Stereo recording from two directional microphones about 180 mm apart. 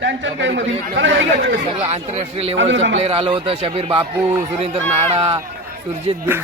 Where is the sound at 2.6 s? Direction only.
90° right.